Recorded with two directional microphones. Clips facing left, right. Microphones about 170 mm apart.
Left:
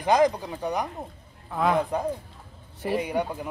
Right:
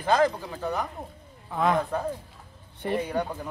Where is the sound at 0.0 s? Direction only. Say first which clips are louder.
Left 2 dB; 15° left (ahead or behind).